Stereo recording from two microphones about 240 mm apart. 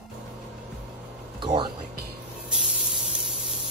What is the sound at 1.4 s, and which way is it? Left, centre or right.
Music, centre.